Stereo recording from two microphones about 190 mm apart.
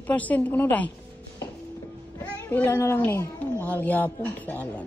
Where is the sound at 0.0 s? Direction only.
10° left (ahead or behind).